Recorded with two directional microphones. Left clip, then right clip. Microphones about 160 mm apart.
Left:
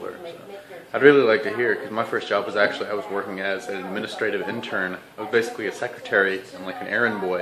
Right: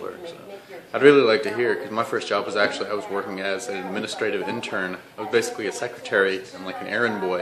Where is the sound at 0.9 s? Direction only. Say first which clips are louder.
Even; 15° right (ahead or behind).